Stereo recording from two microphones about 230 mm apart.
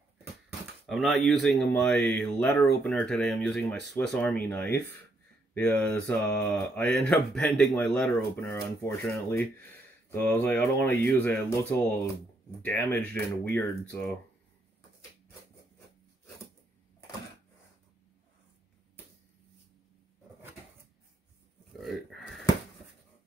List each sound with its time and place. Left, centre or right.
0.8 s mantra: centre
4.0 s speech: centre
5.5 s mantra: centre
10.0 s speech: centre
12.6 s speech: centre
21.7 s a sound: centre